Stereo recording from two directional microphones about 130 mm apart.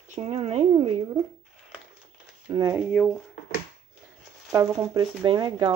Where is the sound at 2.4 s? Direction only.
35° right (ahead or behind).